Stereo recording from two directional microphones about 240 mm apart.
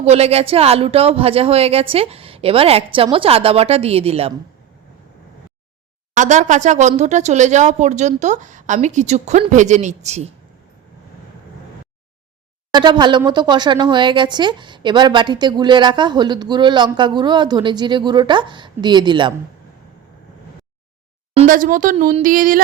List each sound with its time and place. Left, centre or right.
0.0 s speech: right
6.1 s speech: right
12.7 s speech: centre
21.3 s speech: right